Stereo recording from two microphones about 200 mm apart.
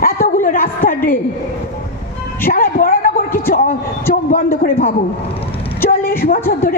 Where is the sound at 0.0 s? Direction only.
45° left (ahead or behind).